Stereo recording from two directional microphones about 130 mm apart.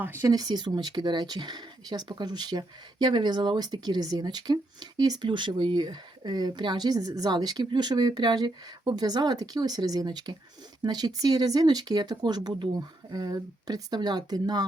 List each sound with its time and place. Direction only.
0.0 s speech: 15° right (ahead or behind)
0.3 s speech: 30° right (ahead or behind)